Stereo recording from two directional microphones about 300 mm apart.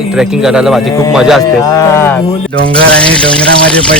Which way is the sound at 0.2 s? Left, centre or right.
Centre.